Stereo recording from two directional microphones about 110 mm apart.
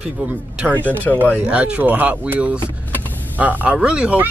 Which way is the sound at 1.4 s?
10° right (ahead or behind).